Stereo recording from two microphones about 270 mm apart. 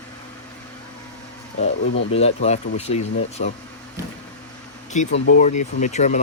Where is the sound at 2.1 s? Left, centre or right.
Left.